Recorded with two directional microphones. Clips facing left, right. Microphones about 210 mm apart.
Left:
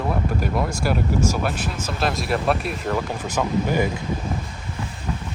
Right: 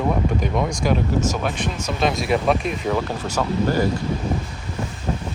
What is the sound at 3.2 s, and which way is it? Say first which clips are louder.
Speech: right 1 dB; 15° left (ahead or behind).